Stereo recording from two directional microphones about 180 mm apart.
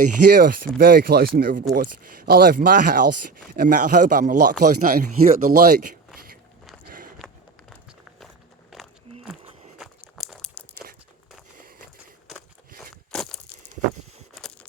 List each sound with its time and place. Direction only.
0.3 s speech: 60° right (ahead or behind)
6.1 s biting: 55° right (ahead or behind)
6.8 s walk: 50° right (ahead or behind)
8.7 s a sound: centre (ahead or behind)
13.1 s a sound: 5° left (ahead or behind)
14.3 s camera: 5° left (ahead or behind)